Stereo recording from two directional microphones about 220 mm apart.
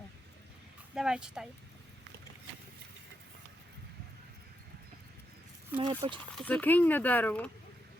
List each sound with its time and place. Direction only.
0.9 s speech: 5° right (ahead or behind)
5.8 s speech: 25° right (ahead or behind)
6.3 s speech: 5° left (ahead or behind)